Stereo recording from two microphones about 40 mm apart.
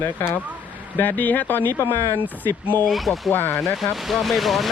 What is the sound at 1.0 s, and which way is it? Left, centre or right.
Speech, left.